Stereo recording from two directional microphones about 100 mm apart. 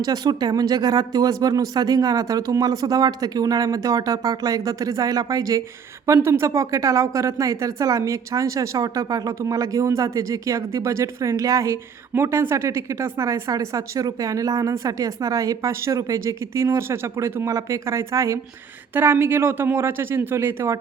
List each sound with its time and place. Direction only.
0.0 s speech: 40° right (ahead or behind)
6.1 s speech: 25° right (ahead or behind)